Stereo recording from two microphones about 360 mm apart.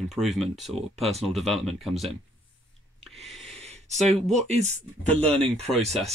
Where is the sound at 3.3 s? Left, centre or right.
Centre.